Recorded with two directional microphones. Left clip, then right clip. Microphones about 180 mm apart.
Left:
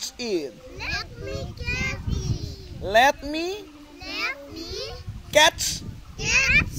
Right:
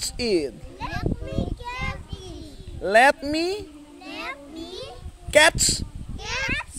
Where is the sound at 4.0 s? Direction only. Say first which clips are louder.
Left 5 dB; 10° left (ahead or behind).